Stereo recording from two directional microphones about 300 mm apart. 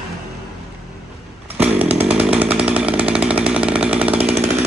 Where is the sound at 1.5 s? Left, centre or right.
Centre.